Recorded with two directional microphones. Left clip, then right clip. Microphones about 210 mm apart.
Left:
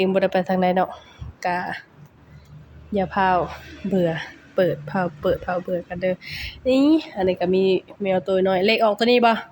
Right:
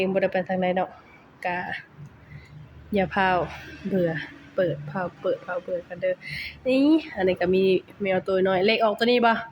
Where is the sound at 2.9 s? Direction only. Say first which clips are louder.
Left 3 dB; 5° left (ahead or behind).